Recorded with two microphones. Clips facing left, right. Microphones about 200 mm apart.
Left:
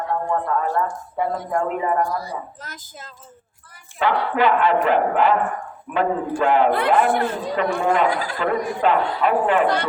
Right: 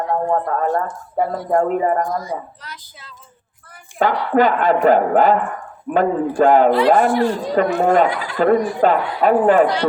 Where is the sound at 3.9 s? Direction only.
40° right (ahead or behind).